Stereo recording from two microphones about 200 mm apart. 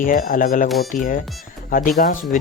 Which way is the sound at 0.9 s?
40° left (ahead or behind).